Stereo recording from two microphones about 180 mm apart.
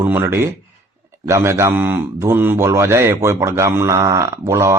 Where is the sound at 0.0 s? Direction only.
10° right (ahead or behind).